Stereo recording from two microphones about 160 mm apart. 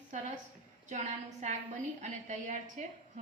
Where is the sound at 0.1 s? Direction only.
50° right (ahead or behind).